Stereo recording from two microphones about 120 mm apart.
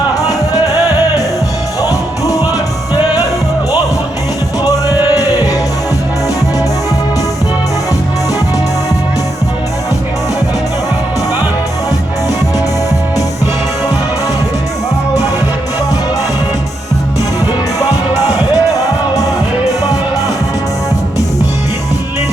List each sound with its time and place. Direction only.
0.3 s music: 30° left (ahead or behind)
1.8 s music: 30° left (ahead or behind)
4.6 s music: 30° left (ahead or behind)
18.3 s music: 30° left (ahead or behind)